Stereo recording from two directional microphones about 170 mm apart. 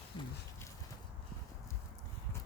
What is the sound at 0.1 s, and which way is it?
Horse, 25° left (ahead or behind).